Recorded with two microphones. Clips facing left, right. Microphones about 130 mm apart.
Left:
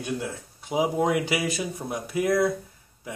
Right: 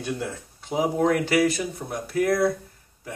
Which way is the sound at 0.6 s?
10° left (ahead or behind).